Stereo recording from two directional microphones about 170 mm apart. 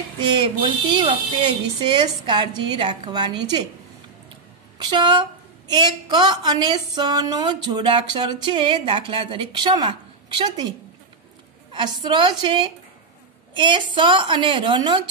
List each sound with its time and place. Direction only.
0.2 s a woman's voice: 30° right (ahead or behind)
4.7 s a woman's voice: 25° right (ahead or behind)
11.7 s a woman's voice: 25° right (ahead or behind)